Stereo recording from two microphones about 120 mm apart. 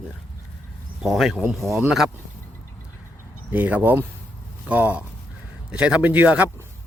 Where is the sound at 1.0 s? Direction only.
Centre (ahead or behind).